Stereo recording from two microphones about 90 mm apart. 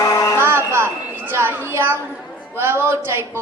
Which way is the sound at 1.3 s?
25° right (ahead or behind).